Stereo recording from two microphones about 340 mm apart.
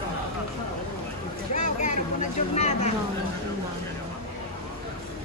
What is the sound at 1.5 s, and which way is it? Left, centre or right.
Speech, left.